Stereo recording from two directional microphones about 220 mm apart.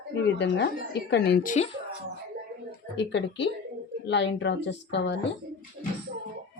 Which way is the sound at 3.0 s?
55° left (ahead or behind).